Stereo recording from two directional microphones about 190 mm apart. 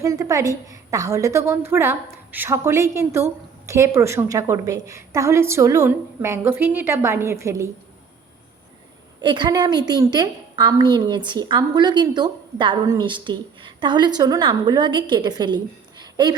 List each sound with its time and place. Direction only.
0.0 s a woman's voice: 15° right (ahead or behind)
9.2 s a woman's voice: 25° right (ahead or behind)